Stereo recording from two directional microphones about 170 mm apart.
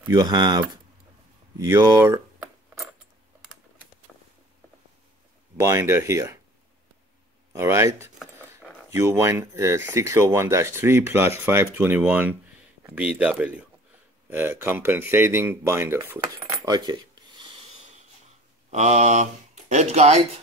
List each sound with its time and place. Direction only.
0.1 s speech: 25° right (ahead or behind)
1.6 s a sound: 15° right (ahead or behind)
5.6 s speech: 15° right (ahead or behind)
7.5 s speech: 15° right (ahead or behind)
18.7 s speech: 40° right (ahead or behind)